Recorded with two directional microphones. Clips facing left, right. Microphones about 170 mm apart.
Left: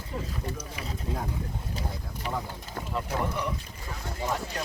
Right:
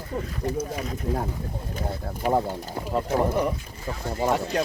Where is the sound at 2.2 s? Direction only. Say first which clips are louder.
Right 11 dB; 50° right (ahead or behind).